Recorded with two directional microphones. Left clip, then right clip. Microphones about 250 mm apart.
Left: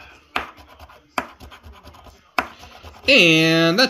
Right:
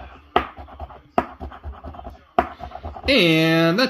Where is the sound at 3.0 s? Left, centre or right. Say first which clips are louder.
Left 3 dB; centre.